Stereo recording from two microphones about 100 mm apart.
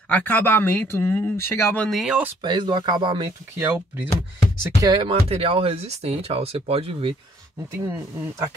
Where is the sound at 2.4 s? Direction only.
50° right (ahead or behind).